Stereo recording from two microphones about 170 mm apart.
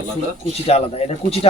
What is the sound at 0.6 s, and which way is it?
Speech, 35° left (ahead or behind).